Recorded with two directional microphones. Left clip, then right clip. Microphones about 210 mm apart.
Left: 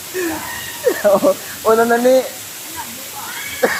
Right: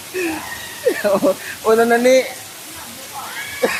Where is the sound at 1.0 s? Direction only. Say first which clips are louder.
Left 5 dB; 25° right (ahead or behind).